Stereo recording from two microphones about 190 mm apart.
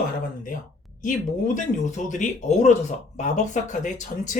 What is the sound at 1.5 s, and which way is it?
Speech, 40° left (ahead or behind).